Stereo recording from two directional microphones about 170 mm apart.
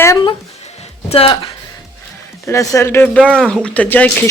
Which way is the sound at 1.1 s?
35° left (ahead or behind).